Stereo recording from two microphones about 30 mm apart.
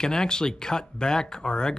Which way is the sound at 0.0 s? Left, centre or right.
Left.